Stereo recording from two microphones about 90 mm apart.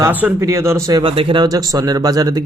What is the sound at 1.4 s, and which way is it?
Speech, 45° right (ahead or behind).